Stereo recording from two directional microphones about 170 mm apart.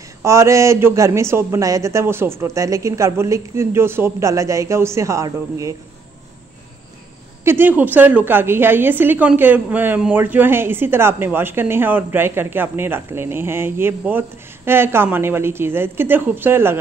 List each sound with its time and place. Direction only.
0.2 s a woman's voice: 15° right (ahead or behind)
7.4 s a woman's voice: 10° right (ahead or behind)